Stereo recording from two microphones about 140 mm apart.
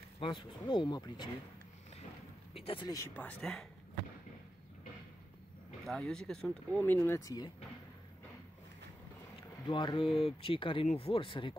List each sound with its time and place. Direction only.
0.2 s speech: 35° left (ahead or behind)
2.5 s speech: 40° left (ahead or behind)
3.2 s speech: 5° left (ahead or behind)
5.9 s speech: centre (ahead or behind); by 7.5 s 25° left (ahead or behind)
9.7 s speech: 35° left (ahead or behind)